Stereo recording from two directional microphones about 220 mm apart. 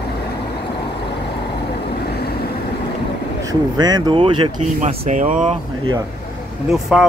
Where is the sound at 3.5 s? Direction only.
20° right (ahead or behind); by 5.5 s 35° right (ahead or behind).